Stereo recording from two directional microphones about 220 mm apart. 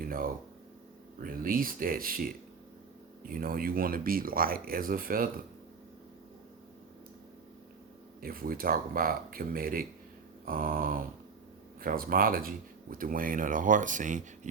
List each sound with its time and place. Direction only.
0.0 s speech: 40° right (ahead or behind)
8.2 s speech: 40° right (ahead or behind)